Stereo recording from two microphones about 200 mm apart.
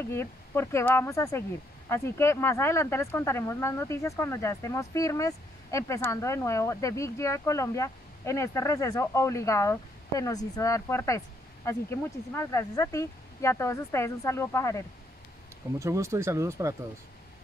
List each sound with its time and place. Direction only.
0.0 s speech: 10° left (ahead or behind)
15.8 s speech: 15° right (ahead or behind)